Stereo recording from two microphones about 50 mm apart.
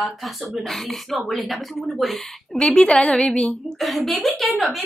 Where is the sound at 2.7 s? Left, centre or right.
Centre.